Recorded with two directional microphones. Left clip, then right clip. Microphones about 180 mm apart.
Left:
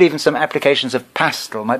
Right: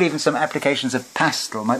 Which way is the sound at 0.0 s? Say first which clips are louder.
Left 5 dB; 50° left (ahead or behind).